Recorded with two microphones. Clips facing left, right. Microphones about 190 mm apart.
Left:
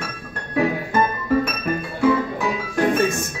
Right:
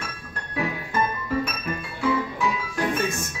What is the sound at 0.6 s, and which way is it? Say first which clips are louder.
Music: left 6 dB; 50° left (ahead or behind).